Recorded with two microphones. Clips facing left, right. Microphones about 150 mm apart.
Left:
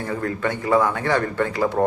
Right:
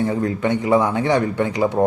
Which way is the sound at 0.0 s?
20° right (ahead or behind).